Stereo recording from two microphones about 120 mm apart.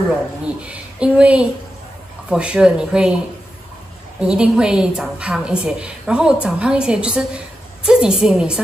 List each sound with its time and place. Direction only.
0.6 s a woman's voice: 10° right (ahead or behind)
4.2 s a woman's voice: 5° right (ahead or behind)